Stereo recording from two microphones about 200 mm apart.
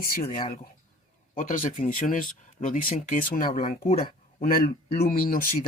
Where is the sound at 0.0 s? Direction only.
45° left (ahead or behind).